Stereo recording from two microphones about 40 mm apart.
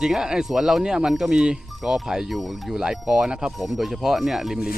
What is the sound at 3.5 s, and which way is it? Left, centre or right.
Speech, centre.